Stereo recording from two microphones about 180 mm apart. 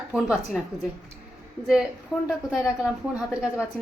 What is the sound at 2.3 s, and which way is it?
Speech, 5° right (ahead or behind).